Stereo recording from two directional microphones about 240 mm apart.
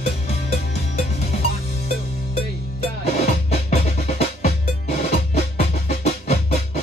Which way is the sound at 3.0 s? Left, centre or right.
Left.